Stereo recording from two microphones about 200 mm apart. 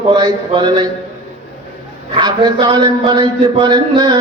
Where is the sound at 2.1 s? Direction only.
20° right (ahead or behind).